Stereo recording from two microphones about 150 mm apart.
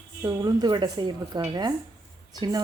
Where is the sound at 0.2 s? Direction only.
25° right (ahead or behind).